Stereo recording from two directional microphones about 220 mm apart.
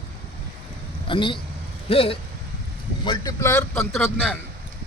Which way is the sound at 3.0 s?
15° left (ahead or behind).